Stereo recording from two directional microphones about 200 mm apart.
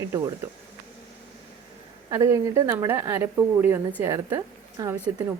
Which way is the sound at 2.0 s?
15° right (ahead or behind).